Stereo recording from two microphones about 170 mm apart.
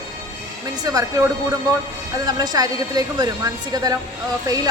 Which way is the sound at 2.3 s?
20° right (ahead or behind).